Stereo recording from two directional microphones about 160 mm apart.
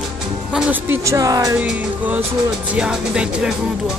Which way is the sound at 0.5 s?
5° right (ahead or behind).